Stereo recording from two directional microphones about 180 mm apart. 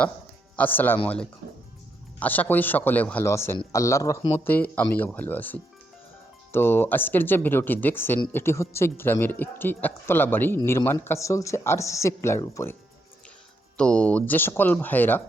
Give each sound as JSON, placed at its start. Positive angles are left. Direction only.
{"t": 0.5, "sound": "speech", "side_deg": 10}
{"t": 13.7, "sound": "speech", "side_deg": 5}